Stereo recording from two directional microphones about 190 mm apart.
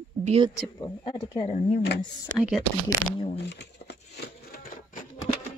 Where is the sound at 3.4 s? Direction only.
65° left (ahead or behind); by 5.0 s 50° left (ahead or behind).